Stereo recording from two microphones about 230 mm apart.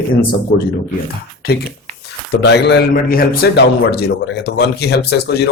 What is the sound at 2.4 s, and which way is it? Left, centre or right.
A man's voice, left.